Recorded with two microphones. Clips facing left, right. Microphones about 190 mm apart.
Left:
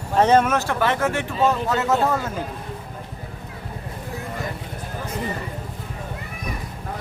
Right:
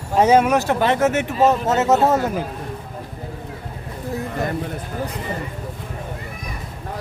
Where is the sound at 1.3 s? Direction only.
40° right (ahead or behind).